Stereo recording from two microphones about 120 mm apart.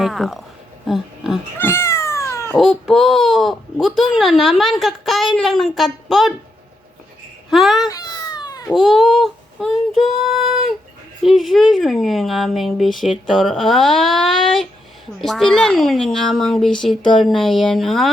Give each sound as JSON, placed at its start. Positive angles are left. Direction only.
{"t": 0.0, "sound": "speech", "side_deg": 0}
{"t": 1.5, "sound": "cat", "side_deg": 20}
{"t": 2.6, "sound": "speech", "side_deg": -5}
{"t": 7.5, "sound": "speech", "side_deg": 0}
{"t": 7.9, "sound": "baby cry", "side_deg": 30}
{"t": 8.7, "sound": "speech", "side_deg": 0}